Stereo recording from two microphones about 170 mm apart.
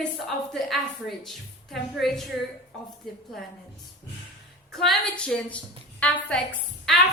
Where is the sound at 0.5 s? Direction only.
Centre (ahead or behind).